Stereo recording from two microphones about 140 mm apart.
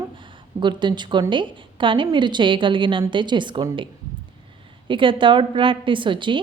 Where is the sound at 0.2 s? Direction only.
35° right (ahead or behind).